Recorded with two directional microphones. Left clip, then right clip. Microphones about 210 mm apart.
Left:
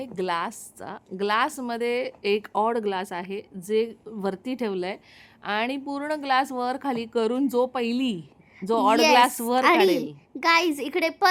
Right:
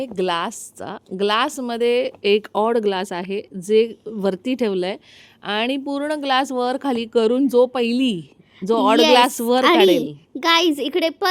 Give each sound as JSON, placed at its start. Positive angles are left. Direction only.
{"t": 0.2, "sound": "a woman's voice", "side_deg": -30}